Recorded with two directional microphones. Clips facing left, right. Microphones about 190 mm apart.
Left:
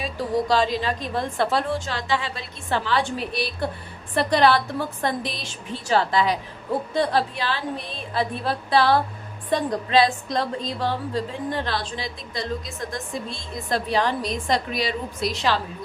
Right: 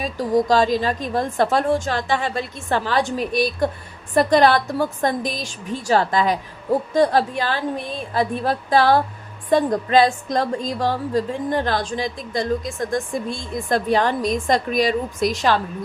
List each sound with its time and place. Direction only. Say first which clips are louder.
0.0 s a woman's voice: right 5 dB; 45° right (ahead or behind)